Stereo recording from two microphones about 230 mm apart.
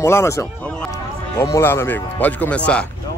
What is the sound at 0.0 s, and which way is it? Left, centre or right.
Speech, centre.